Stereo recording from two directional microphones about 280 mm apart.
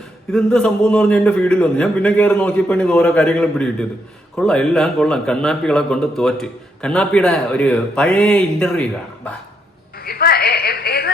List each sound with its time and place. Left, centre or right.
0.3 s a man's voice: centre
10.0 s a woman's voice: left